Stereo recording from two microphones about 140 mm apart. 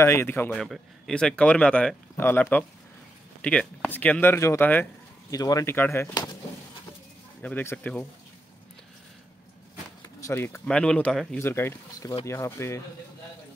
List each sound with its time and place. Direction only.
0.0 s speech: 15° left (ahead or behind)
0.5 s speech: centre (ahead or behind)
5.3 s speech: 25° left (ahead or behind)
7.4 s speech: 10° left (ahead or behind)
10.2 s speech: 15° left (ahead or behind)